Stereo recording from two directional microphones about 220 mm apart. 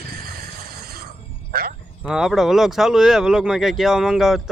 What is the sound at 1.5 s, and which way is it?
Speech, 45° right (ahead or behind).